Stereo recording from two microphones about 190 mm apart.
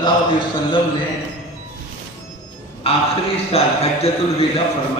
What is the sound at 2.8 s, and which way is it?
A man's voice, 30° left (ahead or behind).